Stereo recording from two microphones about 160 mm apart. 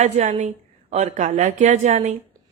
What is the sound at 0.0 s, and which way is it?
A woman's voice, 50° right (ahead or behind).